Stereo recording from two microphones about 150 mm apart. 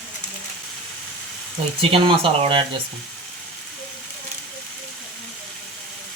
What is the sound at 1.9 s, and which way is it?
Speech, 35° right (ahead or behind).